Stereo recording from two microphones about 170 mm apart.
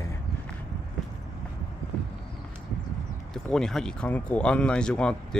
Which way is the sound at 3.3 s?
5° left (ahead or behind).